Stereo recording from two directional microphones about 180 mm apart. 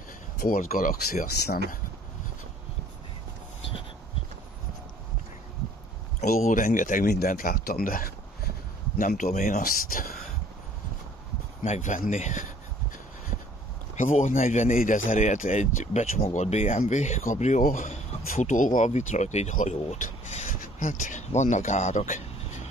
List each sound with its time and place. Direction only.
0.4 s speech: 50° left (ahead or behind)
6.2 s speech: 50° left (ahead or behind)
11.6 s speech: 40° left (ahead or behind)
13.9 s speech: 45° left (ahead or behind)